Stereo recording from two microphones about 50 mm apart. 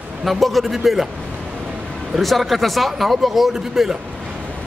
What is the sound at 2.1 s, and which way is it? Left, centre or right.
A man's voice, centre.